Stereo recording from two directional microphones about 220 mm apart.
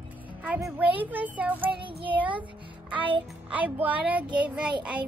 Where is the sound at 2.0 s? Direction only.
20° right (ahead or behind).